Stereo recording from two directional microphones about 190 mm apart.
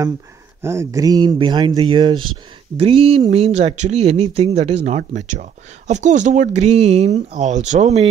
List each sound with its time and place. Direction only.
0.6 s speech: 15° right (ahead or behind); by 8.1 s 35° right (ahead or behind)